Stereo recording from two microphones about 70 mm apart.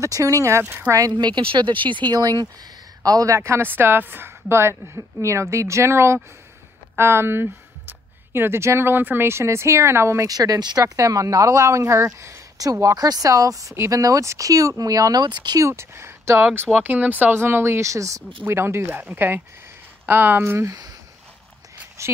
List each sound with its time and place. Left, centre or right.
0.0 s speech: right
1.1 s speech: right
3.0 s speech: right
3.3 s a woman's voice: right
10.2 s speech: right
11.0 s speech: right
12.5 s speech: right
15.6 s speech: right
16.7 s speech: right
17.4 s speech: right
18.5 s a woman's voice: right
20.6 s speech: right
22.0 s a sound: right